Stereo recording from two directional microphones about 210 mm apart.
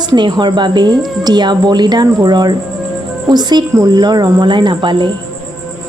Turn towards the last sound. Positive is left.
turn(degrees=-25)  # may be behind; listen again after turning